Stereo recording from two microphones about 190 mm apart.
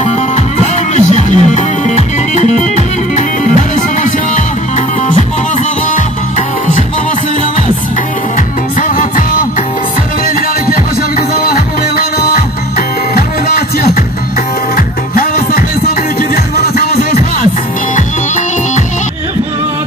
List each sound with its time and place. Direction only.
0.6 s music: 35° left (ahead or behind)
8.8 s music: 45° left (ahead or behind)
10.7 s music: 50° left (ahead or behind)
14.8 s music: 50° left (ahead or behind)